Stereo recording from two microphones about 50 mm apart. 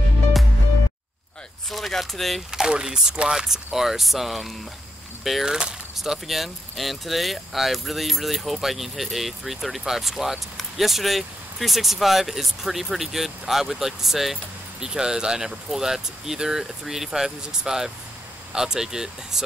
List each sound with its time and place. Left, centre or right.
1.7 s speech: centre
2.5 s speech: centre
5.4 s speech: centre